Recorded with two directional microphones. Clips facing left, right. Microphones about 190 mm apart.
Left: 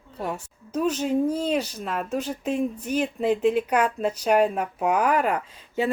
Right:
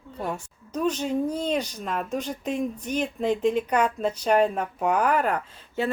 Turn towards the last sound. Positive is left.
turn(degrees=10)  # may be behind; listen again after turning